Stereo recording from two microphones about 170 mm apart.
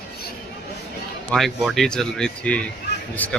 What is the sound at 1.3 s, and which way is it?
Speech, centre (ahead or behind).